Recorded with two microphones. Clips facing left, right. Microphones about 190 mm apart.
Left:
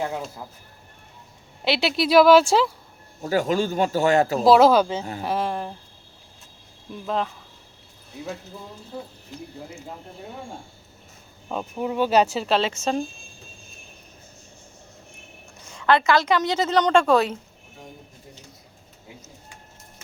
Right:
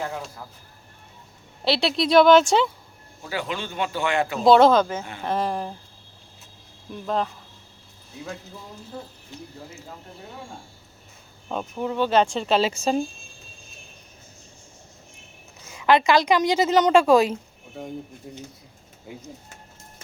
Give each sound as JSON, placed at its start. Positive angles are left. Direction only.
{"t": 1.6, "sound": "speech", "side_deg": 0}
{"t": 3.2, "sound": "a man's voice", "side_deg": 45}
{"t": 4.4, "sound": "speech", "side_deg": 5}
{"t": 6.9, "sound": "speech", "side_deg": 0}
{"t": 11.4, "sound": "speech", "side_deg": 5}
{"t": 15.7, "sound": "a woman's voice", "side_deg": -10}
{"t": 17.8, "sound": "speech", "side_deg": -60}